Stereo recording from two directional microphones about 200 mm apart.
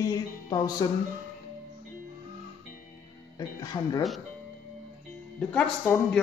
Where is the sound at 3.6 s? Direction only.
20° left (ahead or behind).